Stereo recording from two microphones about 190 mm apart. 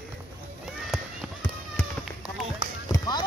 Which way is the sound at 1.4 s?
15° left (ahead or behind).